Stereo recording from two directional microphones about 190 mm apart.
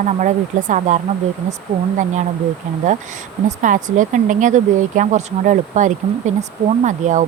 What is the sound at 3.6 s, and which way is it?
Speech, 40° right (ahead or behind).